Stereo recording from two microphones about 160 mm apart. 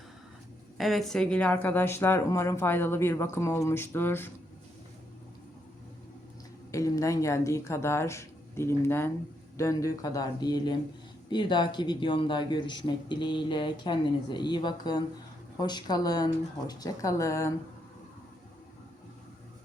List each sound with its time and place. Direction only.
0.8 s speech: centre (ahead or behind)
6.7 s a man's voice: 20° left (ahead or behind)